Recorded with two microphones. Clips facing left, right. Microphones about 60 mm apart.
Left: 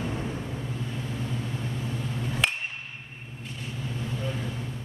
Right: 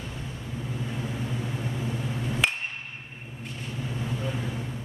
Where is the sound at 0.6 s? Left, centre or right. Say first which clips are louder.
Right 1 dB; centre.